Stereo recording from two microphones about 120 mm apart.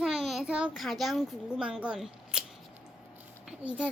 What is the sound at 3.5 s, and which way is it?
Speech, 10° right (ahead or behind).